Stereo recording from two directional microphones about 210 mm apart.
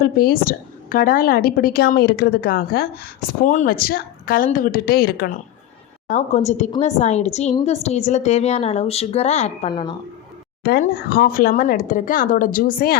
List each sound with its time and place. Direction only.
0.0 s speech: 45° left (ahead or behind)
6.1 s a woman's voice: 35° left (ahead or behind)
10.6 s a woman's voice: 45° left (ahead or behind)